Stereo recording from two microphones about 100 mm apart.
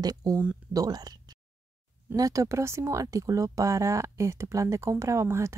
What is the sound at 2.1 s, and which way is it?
Speech, 35° right (ahead or behind).